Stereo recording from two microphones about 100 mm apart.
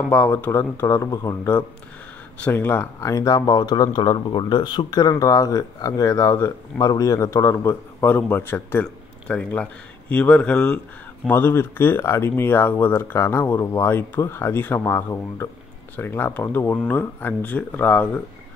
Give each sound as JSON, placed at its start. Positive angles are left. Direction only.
{"t": 0.1, "sound": "speech", "side_deg": 20}
{"t": 3.4, "sound": "speech", "side_deg": 45}
{"t": 5.1, "sound": "speech", "side_deg": 35}